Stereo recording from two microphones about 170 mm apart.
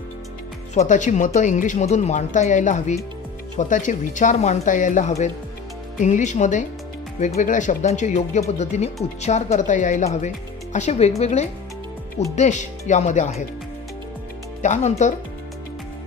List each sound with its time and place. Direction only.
0.7 s speech: 45° left (ahead or behind)
14.6 s speech: 45° left (ahead or behind)